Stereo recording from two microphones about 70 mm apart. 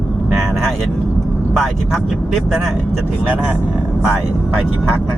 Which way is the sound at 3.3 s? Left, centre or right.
Right.